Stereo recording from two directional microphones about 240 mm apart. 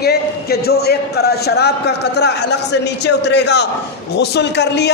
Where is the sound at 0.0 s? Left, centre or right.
Left.